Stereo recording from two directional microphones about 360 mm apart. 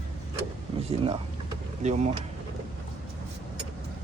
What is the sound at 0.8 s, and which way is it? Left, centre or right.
Speech, centre.